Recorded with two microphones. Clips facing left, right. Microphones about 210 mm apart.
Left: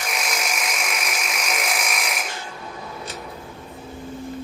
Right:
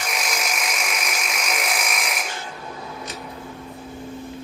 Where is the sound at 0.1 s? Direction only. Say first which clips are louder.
Even; centre (ahead or behind).